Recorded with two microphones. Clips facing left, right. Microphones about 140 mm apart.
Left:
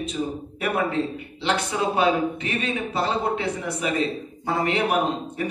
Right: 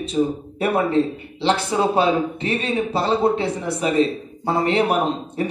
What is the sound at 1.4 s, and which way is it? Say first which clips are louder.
Speech: right 5 dB; 30° right (ahead or behind).